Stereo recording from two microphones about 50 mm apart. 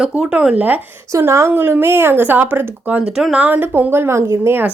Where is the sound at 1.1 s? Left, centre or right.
Right.